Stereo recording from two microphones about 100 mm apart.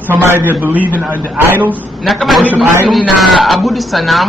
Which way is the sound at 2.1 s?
Centre (ahead or behind).